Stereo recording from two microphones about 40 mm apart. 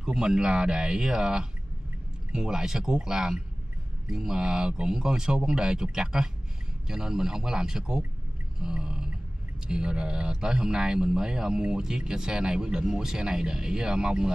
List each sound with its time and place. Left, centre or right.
0.0 s speech: right
8.5 s a sound: right
9.7 s speech: right